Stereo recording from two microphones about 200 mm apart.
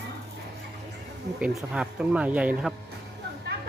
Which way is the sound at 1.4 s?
5° right (ahead or behind).